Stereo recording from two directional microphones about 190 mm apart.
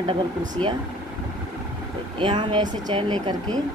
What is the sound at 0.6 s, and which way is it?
Speech, 5° left (ahead or behind).